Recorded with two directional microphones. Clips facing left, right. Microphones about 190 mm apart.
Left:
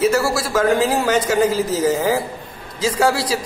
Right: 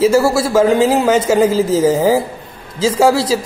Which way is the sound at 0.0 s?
25° right (ahead or behind).